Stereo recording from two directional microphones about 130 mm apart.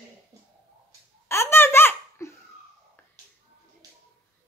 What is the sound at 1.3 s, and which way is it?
Laughter, 20° left (ahead or behind).